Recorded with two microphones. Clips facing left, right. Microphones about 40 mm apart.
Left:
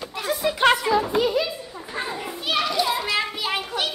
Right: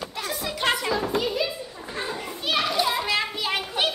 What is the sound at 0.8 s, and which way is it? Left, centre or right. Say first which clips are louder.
Music: left 4 dB; centre.